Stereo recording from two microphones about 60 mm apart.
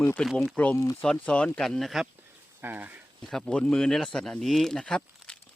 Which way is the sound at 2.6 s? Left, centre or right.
Right.